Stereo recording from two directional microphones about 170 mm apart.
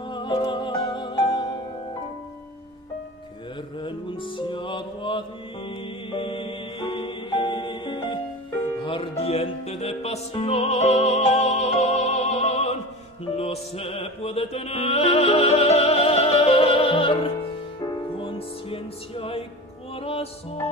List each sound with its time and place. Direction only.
0.0 s music: 25° left (ahead or behind)
3.8 s music: 30° left (ahead or behind)